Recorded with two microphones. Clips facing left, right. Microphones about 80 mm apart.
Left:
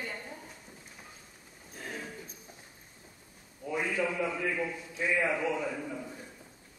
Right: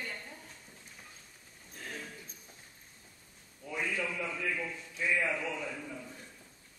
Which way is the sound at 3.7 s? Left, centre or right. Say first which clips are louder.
Left 4 dB; centre.